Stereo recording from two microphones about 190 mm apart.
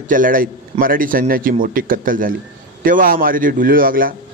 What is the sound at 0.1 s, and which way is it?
A man's voice, 45° right (ahead or behind).